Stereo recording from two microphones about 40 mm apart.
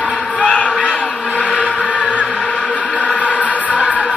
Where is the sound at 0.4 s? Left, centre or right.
Left.